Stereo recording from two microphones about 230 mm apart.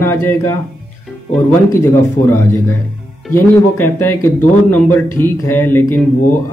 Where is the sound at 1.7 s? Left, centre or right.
Centre.